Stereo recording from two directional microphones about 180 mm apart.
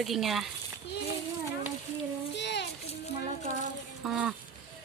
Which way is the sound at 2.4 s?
75° left (ahead or behind).